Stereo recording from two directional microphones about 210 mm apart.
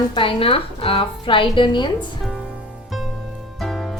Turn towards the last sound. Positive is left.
turn(degrees=0)  # may be behind; listen again after turning